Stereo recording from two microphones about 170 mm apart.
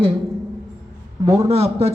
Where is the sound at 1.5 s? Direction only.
35° right (ahead or behind).